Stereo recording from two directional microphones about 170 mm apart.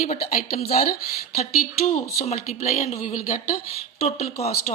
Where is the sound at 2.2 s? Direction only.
40° left (ahead or behind).